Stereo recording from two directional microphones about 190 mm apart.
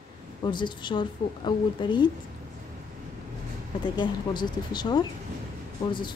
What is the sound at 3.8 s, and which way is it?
A woman's voice, 25° left (ahead or behind).